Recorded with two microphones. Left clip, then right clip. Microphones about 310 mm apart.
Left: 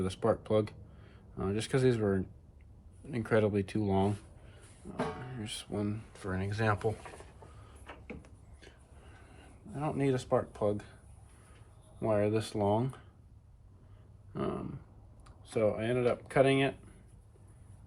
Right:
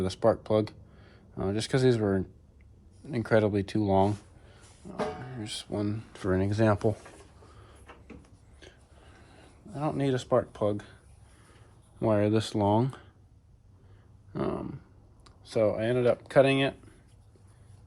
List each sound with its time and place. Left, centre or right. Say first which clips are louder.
0.0 s speech: right 5 dB; right
5.2 s speech: right 4 dB; right; by 6.9 s centre
9.3 s speech: right 4 dB; right
11.9 s speech: right 4 dB; right
14.3 s speech: right 4 dB; right